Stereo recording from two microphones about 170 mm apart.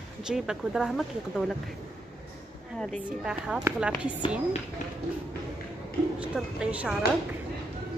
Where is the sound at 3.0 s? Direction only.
5° right (ahead or behind).